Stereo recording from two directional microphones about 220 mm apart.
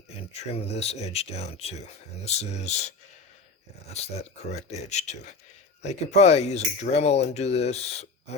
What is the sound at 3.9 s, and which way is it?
Speech, 30° left (ahead or behind).